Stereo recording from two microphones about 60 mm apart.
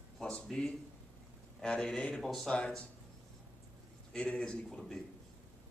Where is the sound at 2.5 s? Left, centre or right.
Centre.